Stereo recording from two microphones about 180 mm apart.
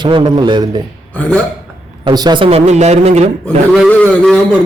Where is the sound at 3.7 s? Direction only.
5° left (ahead or behind).